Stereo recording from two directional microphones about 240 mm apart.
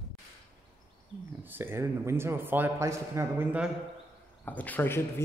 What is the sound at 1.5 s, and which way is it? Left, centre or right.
A man's voice, centre.